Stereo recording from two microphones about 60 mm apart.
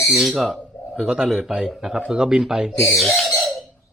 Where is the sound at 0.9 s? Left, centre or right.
Centre.